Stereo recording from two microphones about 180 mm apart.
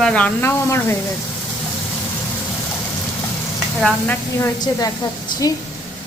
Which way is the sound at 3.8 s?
5° left (ahead or behind).